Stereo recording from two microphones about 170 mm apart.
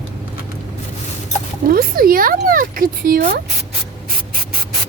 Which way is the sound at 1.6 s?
60° right (ahead or behind).